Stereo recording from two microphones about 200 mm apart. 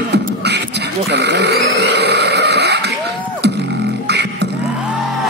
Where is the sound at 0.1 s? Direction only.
55° right (ahead or behind).